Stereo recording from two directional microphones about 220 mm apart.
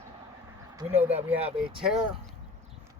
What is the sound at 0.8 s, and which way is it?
Speech, 10° right (ahead or behind).